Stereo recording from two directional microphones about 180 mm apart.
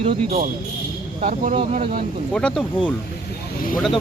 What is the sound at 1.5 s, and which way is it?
Speech, 30° right (ahead or behind).